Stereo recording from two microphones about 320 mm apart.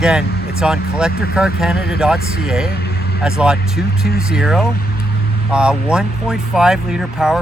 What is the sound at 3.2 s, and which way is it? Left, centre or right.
Speech, centre.